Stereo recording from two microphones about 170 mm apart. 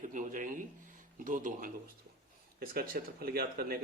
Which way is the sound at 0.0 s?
50° right (ahead or behind).